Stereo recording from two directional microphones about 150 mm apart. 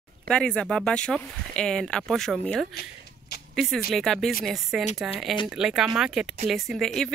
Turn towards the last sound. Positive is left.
turn(degrees=0)  # may be behind; listen again after turning